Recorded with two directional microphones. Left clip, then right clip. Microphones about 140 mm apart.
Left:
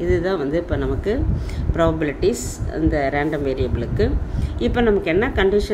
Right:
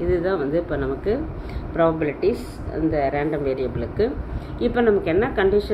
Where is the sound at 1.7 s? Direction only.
45° left (ahead or behind).